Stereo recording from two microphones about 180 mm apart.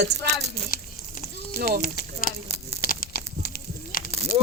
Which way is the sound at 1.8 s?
50° left (ahead or behind).